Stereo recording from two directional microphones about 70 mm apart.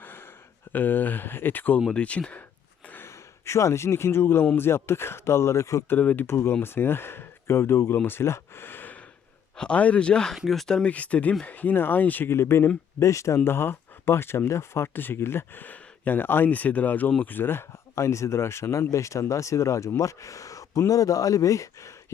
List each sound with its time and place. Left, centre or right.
0.0 s a sound: left
0.7 s speech: left
2.8 s gasp: left
3.1 s speech: left
5.9 s speech: left
6.2 s speech: left
7.9 s a sound: left
9.6 s speech: centre
10.3 s speech: centre
10.8 s speech: centre
12.3 s speech: left
17.3 s speech: left